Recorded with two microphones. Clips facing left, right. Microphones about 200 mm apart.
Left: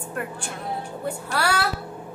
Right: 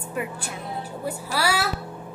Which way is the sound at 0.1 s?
5° right (ahead or behind).